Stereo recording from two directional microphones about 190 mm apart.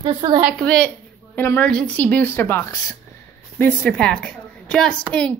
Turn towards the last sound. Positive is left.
turn(degrees=5)  # may be behind; listen again after turning